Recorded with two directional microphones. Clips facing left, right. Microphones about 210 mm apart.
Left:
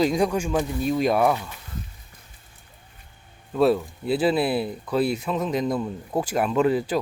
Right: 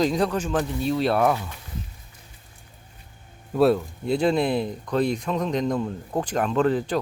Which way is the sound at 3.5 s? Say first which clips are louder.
Right 1 dB; centre (ahead or behind).